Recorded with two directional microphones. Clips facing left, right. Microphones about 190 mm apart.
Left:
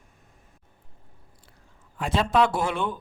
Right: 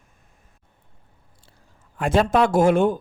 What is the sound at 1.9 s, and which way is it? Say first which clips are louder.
Speech: right 4 dB; 50° right (ahead or behind).